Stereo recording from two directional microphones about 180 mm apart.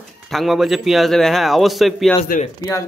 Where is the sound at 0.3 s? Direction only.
Centre (ahead or behind).